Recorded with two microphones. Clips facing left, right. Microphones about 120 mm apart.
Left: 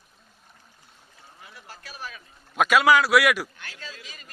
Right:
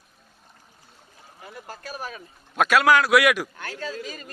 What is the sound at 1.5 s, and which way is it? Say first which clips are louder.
Speech: right 8 dB; 45° right (ahead or behind).